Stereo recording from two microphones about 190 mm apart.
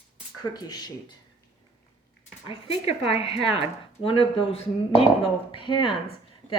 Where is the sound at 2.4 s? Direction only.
30° left (ahead or behind).